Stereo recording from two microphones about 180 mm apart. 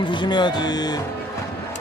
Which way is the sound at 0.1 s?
25° left (ahead or behind).